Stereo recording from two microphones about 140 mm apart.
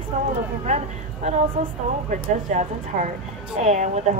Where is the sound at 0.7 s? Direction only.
50° right (ahead or behind).